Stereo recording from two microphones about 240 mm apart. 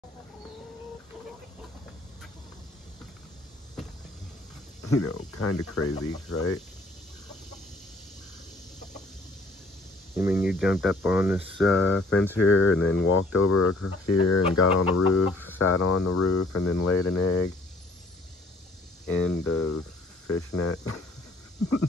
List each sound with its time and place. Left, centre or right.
4.8 s speech: left
10.1 s speech: centre
12.4 s speech: left
13.3 s speech: left
19.0 s speech: centre
19.4 s speech: left